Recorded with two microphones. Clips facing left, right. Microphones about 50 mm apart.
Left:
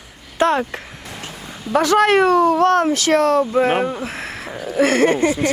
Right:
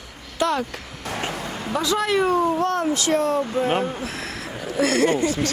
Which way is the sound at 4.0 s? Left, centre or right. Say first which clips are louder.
Left 3 dB; left.